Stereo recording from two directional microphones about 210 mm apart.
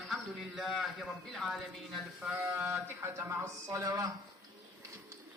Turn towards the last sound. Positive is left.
turn(degrees=-15)  # may be behind; listen again after turning